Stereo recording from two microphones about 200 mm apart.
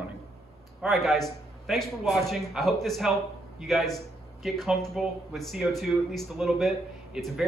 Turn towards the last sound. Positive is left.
turn(degrees=0)  # may be behind; listen again after turning